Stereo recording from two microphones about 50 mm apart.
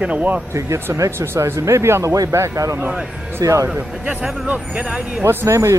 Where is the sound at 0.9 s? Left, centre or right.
Right.